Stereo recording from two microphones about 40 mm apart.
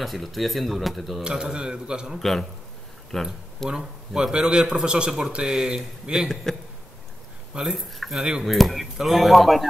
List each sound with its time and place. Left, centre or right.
0.0 s speech: centre
1.2 s speech: centre
2.1 s a man's voice: centre
3.7 s speech: right
6.1 s speech: right
6.5 s a man's voice: centre
7.5 s speech: centre